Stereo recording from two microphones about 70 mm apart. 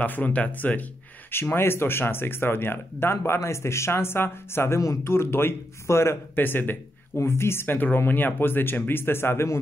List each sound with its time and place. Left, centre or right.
0.0 s speech: left
6.4 s speech: left